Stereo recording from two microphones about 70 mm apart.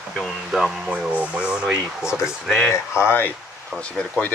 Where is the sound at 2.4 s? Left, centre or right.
Centre.